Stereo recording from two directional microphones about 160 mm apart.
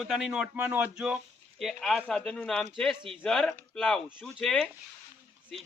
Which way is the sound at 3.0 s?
30° right (ahead or behind).